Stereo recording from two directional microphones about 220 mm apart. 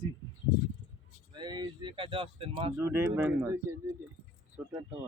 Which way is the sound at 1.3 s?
20° right (ahead or behind).